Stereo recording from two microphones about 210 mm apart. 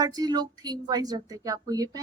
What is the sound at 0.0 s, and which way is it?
A woman's voice, 20° right (ahead or behind).